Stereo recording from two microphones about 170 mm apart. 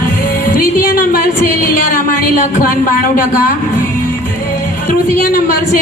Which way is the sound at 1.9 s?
55° left (ahead or behind).